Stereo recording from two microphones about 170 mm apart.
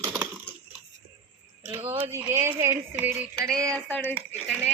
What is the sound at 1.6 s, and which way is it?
Speech, 15° right (ahead or behind).